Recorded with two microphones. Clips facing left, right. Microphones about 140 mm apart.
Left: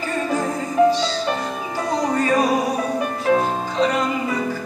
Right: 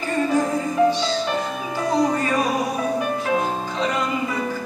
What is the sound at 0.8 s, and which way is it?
Music, 35° left (ahead or behind).